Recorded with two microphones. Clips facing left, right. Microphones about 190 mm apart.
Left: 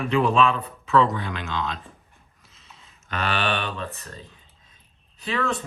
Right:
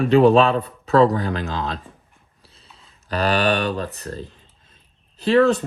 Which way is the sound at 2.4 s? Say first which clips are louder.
Right 2 dB; 35° right (ahead or behind).